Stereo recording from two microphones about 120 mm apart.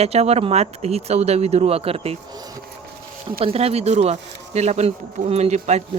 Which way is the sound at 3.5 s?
55° right (ahead or behind).